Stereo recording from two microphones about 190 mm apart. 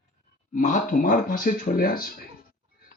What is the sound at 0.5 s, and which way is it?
Speech, 45° left (ahead or behind).